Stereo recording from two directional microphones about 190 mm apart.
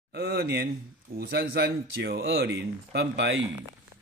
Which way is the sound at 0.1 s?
60° right (ahead or behind).